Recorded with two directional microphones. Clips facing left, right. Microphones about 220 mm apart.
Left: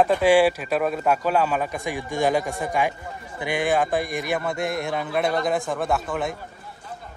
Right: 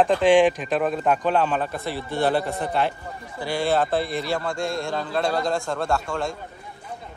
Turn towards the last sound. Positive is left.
turn(degrees=20)  # may be behind; listen again after turning